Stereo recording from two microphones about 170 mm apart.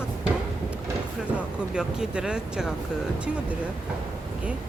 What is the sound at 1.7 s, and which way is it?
Speech, 5° right (ahead or behind).